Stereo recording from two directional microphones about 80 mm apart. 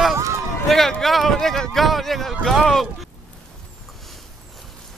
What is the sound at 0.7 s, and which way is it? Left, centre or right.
Speech, centre.